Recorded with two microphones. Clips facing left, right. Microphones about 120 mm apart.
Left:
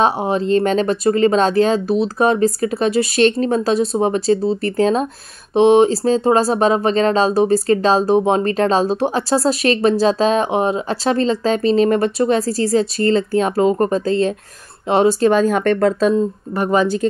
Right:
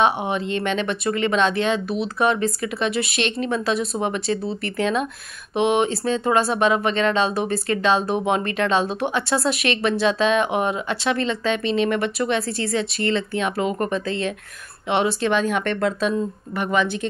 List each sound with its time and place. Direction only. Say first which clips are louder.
0.0 s speech: left 4 dB; 35° left (ahead or behind)